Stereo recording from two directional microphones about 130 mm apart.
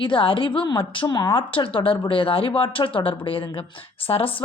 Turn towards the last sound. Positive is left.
turn(degrees=45)  # may be behind; listen again after turning